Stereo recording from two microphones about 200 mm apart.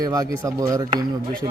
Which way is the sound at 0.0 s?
15° right (ahead or behind).